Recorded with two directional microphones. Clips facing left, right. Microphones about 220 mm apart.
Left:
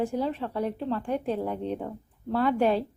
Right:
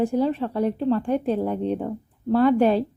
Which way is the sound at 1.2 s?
30° right (ahead or behind).